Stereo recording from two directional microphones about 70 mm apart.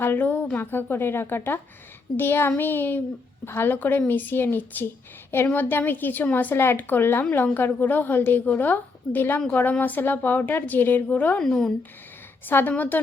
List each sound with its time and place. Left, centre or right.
0.0 s a woman's voice: left
11.3 s speech: centre
12.5 s a woman's voice: left